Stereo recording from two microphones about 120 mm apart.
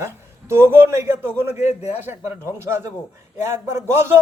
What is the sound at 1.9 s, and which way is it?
A man's voice, 15° right (ahead or behind).